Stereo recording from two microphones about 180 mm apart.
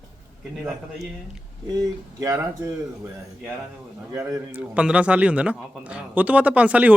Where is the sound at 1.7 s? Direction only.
20° right (ahead or behind).